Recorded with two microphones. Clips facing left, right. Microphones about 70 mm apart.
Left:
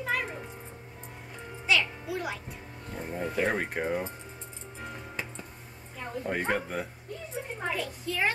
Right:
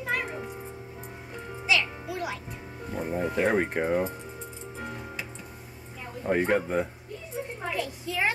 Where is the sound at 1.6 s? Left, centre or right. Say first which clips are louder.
Even; centre.